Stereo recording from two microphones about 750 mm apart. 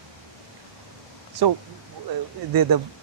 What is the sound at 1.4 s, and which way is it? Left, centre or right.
Speech, right.